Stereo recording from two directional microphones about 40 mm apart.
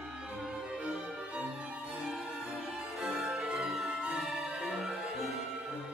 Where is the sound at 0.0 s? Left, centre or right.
Centre.